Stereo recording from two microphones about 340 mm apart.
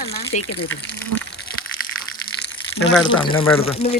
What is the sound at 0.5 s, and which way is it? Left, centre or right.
Speech, left.